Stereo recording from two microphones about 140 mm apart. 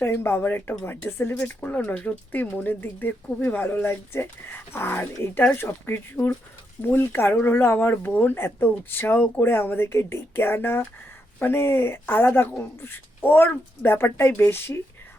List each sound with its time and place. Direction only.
0.0 s speech: 15° left (ahead or behind)